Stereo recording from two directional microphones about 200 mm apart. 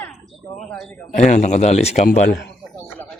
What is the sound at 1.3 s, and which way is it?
Speech, 35° left (ahead or behind).